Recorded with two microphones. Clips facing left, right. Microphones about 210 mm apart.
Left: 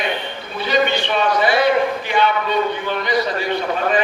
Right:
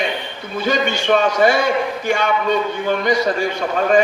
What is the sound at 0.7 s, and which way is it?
A man's voice, 45° right (ahead or behind).